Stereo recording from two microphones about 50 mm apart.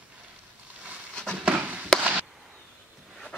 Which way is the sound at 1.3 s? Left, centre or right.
Right.